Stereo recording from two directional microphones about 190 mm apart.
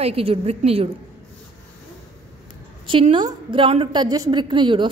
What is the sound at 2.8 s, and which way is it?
A woman's voice, 25° right (ahead or behind).